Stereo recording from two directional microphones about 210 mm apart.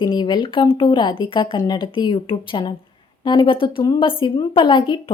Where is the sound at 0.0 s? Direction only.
20° left (ahead or behind).